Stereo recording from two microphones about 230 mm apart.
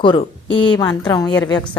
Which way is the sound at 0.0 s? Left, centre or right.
Left.